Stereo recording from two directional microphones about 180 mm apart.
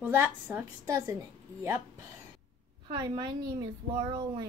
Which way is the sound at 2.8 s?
25° right (ahead or behind).